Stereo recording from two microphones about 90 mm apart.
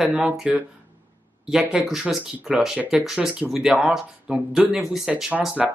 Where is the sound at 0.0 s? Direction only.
5° right (ahead or behind).